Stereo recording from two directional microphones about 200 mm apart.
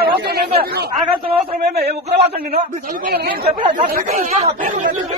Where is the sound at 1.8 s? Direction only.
55° right (ahead or behind).